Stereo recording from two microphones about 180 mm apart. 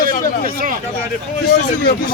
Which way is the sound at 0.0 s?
50° right (ahead or behind).